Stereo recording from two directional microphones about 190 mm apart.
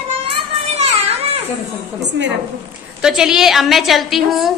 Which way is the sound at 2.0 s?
65° right (ahead or behind).